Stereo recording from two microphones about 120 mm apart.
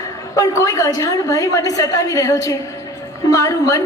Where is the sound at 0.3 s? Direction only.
30° left (ahead or behind).